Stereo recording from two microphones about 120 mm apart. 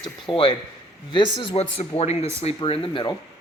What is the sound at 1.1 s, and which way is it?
Speech, 45° left (ahead or behind).